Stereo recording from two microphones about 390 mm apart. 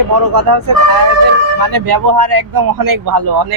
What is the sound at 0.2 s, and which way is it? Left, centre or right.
Speech, right.